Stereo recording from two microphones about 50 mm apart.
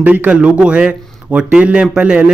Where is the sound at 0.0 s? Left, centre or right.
Right.